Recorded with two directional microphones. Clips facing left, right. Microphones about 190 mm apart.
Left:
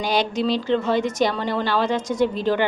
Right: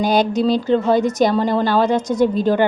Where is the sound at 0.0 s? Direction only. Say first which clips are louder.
Right 6 dB; 45° right (ahead or behind).